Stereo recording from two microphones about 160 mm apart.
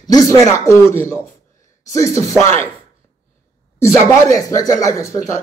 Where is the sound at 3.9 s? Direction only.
20° left (ahead or behind).